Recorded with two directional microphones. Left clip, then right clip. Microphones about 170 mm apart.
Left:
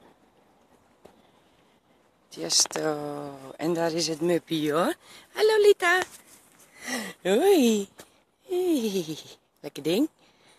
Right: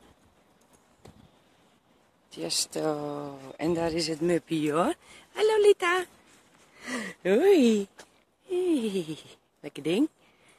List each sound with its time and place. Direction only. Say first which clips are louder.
2.3 s speech: left 5 dB; 5° right (ahead or behind)
8.5 s speech: left 1 dB; centre (ahead or behind)